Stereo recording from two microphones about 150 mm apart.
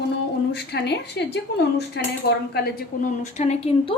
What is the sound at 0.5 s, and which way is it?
A woman's voice, 90° left.